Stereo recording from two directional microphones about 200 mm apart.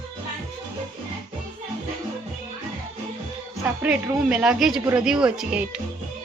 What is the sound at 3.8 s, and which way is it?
A woman's voice, 5° right (ahead or behind).